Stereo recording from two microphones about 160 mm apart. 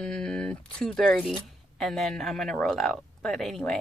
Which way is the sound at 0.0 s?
5° left (ahead or behind).